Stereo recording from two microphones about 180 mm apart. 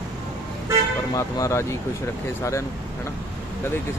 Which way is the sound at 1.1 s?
15° left (ahead or behind).